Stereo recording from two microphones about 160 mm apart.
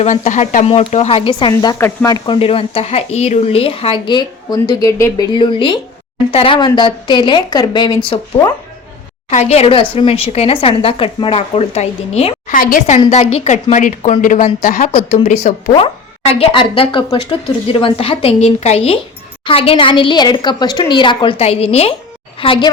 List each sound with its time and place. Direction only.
0.0 s speech: 50° left (ahead or behind); by 1.7 s 30° left (ahead or behind)
1.8 s speech: 15° left (ahead or behind)
2.1 s a woman's voice: 30° left (ahead or behind)
9.3 s speech: 45° left (ahead or behind)
12.5 s speech: 60° left (ahead or behind)
13.1 s a woman's voice: 45° left (ahead or behind)